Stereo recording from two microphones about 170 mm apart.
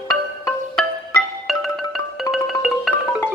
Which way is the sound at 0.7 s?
Centre (ahead or behind).